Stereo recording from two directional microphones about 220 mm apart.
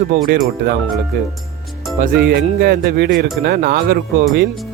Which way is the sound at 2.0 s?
45° right (ahead or behind).